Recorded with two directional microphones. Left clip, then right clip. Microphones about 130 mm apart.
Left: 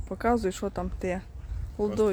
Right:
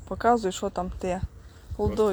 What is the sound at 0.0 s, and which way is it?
Speech, 5° left (ahead or behind).